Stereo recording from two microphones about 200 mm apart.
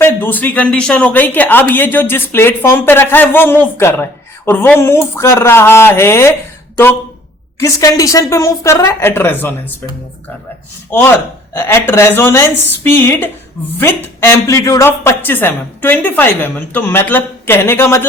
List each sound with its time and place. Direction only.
0.0 s speech: 10° left (ahead or behind)
7.6 s speech: 15° left (ahead or behind)
11.5 s speech: 10° left (ahead or behind)